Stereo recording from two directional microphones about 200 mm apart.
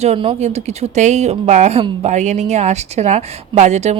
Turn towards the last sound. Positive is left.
turn(degrees=-35)  # may be behind; listen again after turning